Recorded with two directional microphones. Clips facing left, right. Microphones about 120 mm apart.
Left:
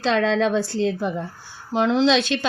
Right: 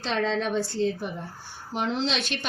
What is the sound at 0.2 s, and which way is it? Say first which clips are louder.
Speech: left 6 dB; 90° left.